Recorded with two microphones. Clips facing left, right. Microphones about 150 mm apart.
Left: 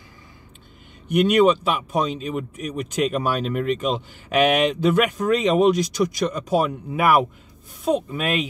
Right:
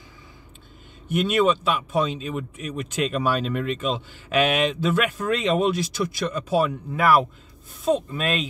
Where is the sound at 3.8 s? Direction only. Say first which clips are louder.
Left 2 dB; 55° left (ahead or behind).